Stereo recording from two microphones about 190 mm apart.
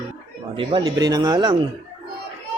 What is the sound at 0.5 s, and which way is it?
Speech, 25° right (ahead or behind).